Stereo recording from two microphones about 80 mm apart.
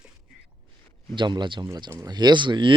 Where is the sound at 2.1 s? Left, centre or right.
Right.